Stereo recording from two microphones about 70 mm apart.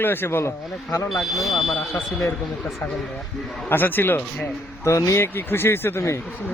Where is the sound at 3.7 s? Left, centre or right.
Left.